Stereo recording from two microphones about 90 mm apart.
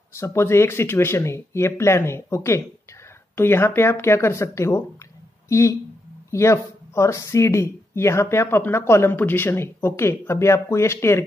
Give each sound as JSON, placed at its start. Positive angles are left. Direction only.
{"t": 0.1, "sound": "speech", "side_deg": 30}